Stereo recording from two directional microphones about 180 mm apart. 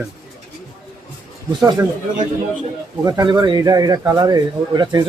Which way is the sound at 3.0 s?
20° right (ahead or behind).